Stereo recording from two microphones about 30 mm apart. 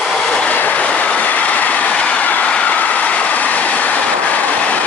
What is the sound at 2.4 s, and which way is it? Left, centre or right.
Vehicle, left.